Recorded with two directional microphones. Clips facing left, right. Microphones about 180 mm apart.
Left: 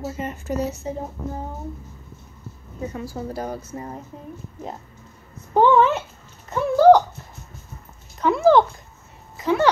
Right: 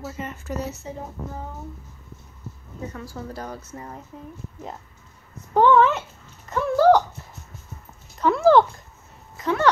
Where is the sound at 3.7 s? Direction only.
25° left (ahead or behind).